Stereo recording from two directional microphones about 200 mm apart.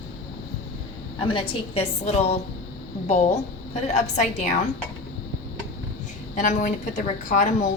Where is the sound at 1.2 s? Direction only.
25° left (ahead or behind).